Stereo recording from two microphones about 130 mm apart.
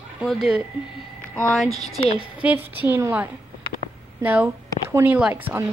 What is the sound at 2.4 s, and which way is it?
A woman's voice, 10° right (ahead or behind).